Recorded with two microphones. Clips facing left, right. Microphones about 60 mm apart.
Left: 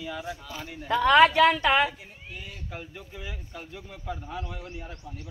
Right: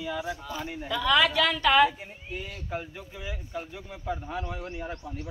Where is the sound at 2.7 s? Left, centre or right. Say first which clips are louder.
Right 6 dB; centre.